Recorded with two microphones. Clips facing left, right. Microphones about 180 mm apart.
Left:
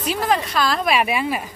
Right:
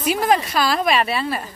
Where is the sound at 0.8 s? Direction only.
10° left (ahead or behind).